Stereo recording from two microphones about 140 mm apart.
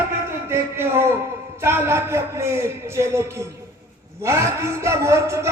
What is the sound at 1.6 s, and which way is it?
Speech, 15° right (ahead or behind).